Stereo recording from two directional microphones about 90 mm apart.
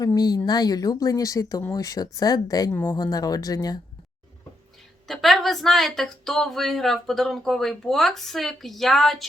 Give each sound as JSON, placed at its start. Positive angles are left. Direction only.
{"t": 0.0, "sound": "speech", "side_deg": 45}
{"t": 5.0, "sound": "a woman's voice", "side_deg": 0}